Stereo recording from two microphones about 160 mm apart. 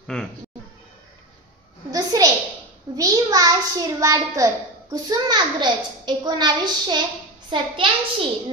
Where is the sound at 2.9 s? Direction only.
25° right (ahead or behind).